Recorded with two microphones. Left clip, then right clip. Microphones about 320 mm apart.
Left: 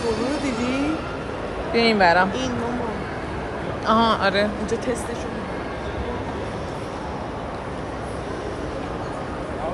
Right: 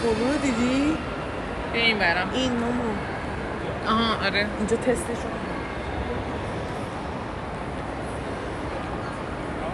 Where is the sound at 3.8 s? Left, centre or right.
Centre.